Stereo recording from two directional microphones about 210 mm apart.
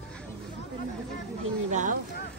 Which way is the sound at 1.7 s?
35° right (ahead or behind).